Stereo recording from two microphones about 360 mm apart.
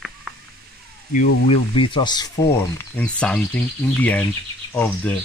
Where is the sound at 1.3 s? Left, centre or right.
Left.